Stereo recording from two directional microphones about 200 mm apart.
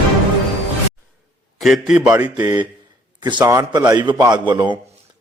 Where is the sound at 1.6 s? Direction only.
Centre (ahead or behind).